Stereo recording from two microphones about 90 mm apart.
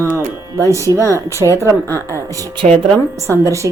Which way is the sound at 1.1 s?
30° right (ahead or behind).